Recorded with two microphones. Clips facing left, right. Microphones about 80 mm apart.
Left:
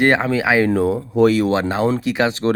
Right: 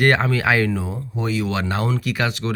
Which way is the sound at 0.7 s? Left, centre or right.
Left.